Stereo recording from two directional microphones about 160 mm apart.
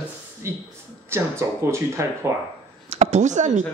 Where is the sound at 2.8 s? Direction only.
45° right (ahead or behind).